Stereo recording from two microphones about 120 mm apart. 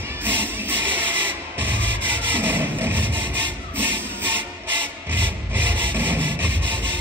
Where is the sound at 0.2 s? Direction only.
15° right (ahead or behind).